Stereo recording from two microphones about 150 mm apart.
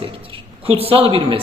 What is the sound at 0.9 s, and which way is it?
Speech, 40° right (ahead or behind).